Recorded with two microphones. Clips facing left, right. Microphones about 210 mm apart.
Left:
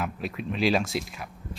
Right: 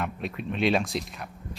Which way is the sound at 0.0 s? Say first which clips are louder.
Even; 5° left (ahead or behind).